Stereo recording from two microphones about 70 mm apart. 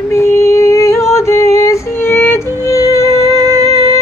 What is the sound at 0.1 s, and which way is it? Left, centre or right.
Music, left.